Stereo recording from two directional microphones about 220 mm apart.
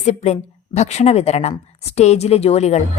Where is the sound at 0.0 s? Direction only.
30° left (ahead or behind).